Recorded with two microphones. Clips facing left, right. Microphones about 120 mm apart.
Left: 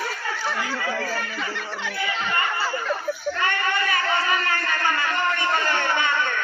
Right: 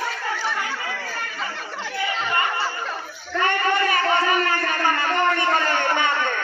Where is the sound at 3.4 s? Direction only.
35° right (ahead or behind).